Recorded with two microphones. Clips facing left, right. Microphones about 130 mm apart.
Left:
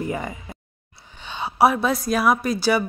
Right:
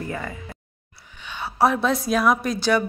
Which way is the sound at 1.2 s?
25° left (ahead or behind).